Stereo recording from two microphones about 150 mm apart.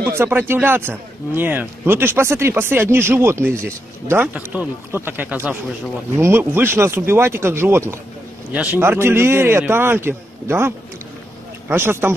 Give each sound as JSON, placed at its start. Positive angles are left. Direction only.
{"t": 0.0, "sound": "speech", "side_deg": -15}
{"t": 11.7, "sound": "speech", "side_deg": -15}